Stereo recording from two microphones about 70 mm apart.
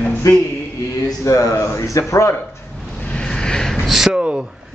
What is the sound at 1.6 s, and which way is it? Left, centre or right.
Speech, left.